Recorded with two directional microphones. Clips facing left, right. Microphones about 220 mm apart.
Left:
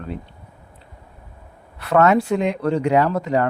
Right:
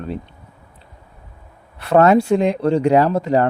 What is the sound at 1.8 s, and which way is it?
Speech, 30° right (ahead or behind).